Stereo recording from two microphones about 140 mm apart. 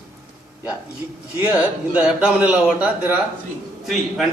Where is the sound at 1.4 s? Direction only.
10° right (ahead or behind).